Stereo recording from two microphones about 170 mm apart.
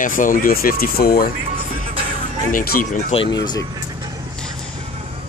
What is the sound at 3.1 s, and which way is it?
Speech, 35° left (ahead or behind).